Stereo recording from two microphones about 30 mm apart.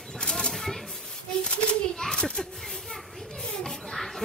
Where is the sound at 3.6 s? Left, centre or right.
Centre.